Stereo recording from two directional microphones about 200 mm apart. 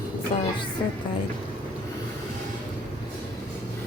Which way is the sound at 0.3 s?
25° left (ahead or behind).